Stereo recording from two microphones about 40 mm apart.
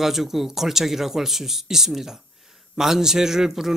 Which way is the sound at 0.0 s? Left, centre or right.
Centre.